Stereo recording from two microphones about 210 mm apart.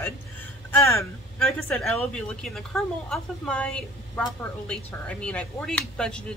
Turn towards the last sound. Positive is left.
turn(degrees=5)  # may be behind; listen again after turning